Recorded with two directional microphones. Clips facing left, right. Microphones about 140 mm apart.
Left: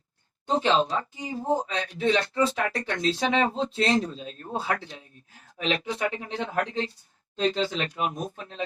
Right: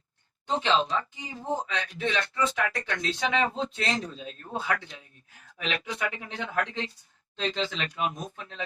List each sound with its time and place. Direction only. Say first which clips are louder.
0.4 s speech: left 3 dB; 35° left (ahead or behind)